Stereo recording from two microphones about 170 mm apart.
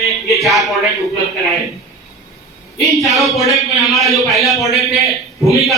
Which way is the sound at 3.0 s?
Centre (ahead or behind).